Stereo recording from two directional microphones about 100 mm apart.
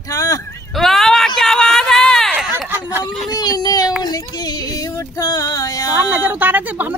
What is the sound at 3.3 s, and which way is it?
Female singing, 40° left (ahead or behind).